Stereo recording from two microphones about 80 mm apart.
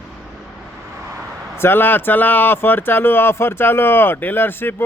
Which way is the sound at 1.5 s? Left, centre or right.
Left.